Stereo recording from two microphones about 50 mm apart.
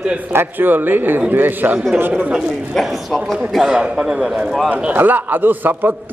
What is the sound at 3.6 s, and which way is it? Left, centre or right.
A man's voice, centre.